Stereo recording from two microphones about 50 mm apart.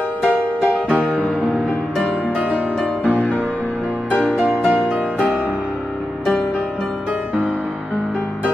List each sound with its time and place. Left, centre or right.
0.8 s music: right
1.2 s music: left
2.3 s music: right
3.1 s music: left